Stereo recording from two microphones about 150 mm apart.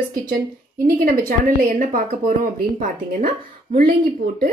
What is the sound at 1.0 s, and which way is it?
Speech, 70° right (ahead or behind).